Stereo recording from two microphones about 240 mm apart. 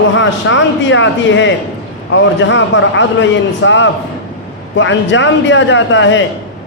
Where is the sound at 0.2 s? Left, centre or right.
Left.